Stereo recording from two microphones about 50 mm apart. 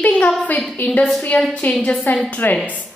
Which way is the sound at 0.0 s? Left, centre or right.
Left.